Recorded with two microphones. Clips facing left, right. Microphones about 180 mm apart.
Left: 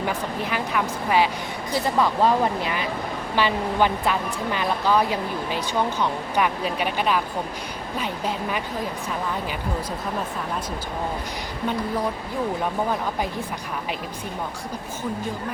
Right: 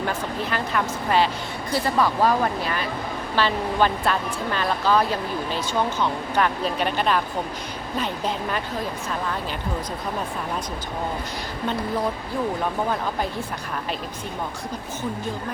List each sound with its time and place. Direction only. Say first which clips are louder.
0.0 s speech: even; 10° left (ahead or behind)